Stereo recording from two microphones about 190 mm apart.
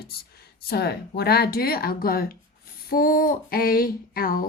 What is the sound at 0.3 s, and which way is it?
Speech, 55° left (ahead or behind).